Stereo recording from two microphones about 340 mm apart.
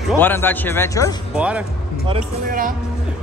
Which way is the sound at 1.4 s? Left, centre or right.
Centre.